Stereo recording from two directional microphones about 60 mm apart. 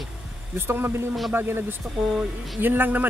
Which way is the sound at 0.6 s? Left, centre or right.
Right.